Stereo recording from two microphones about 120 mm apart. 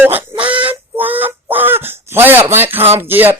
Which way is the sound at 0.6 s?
15° right (ahead or behind).